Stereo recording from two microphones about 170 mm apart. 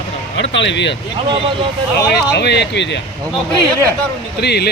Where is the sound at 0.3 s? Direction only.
90° left.